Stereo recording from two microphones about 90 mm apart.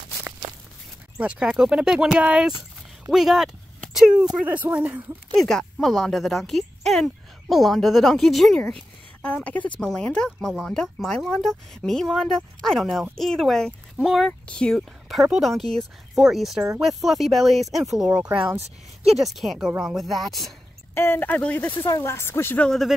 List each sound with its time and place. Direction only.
1.1 s speech: 10° right (ahead or behind)
5.3 s speech: 5° left (ahead or behind); by 18.6 s 15° right (ahead or behind)
19.1 s speech: centre (ahead or behind)
20.9 s speech: 25° left (ahead or behind)
21.3 s speech: 15° left (ahead or behind)
21.6 s speech: 35° left (ahead or behind)
22.6 s speech: centre (ahead or behind)